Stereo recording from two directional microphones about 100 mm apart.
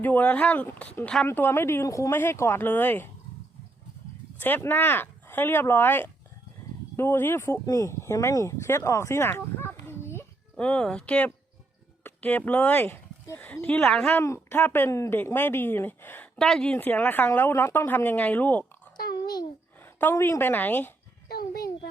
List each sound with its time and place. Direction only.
0.0 s speech: 15° left (ahead or behind)
4.4 s speech: 20° left (ahead or behind)
10.6 s speech: 10° left (ahead or behind)
14.1 s speech: 25° left (ahead or behind); by 16.7 s 5° left (ahead or behind)
16.7 s speech: 15° left (ahead or behind)
19.8 s a sound: 20° left (ahead or behind)
20.1 s speech: 30° left (ahead or behind)